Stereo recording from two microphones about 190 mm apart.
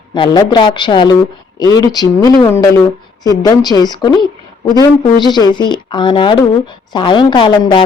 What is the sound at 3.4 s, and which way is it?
A woman's voice, 20° left (ahead or behind).